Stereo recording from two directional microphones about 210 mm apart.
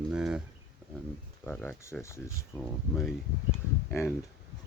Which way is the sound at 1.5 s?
10° left (ahead or behind).